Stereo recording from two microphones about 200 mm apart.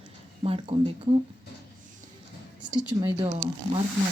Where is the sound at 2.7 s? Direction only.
5° right (ahead or behind).